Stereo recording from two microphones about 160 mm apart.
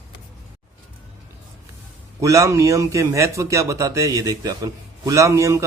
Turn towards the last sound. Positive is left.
turn(degrees=-20)  # may be behind; listen again after turning